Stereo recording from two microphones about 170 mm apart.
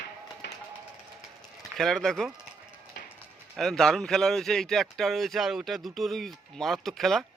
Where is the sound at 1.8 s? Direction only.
Centre (ahead or behind).